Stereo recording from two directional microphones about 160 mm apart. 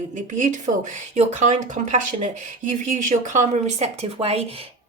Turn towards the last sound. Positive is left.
turn(degrees=-40)  # may be behind; listen again after turning